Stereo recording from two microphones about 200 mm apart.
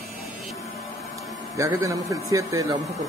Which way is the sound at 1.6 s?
15° right (ahead or behind).